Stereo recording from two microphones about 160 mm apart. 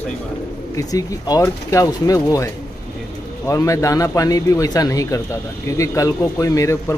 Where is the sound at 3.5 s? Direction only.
20° left (ahead or behind).